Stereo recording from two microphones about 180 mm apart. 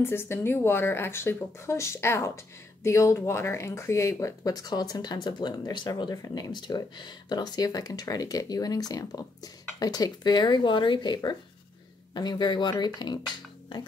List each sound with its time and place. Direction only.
0.0 s speech: 15° left (ahead or behind)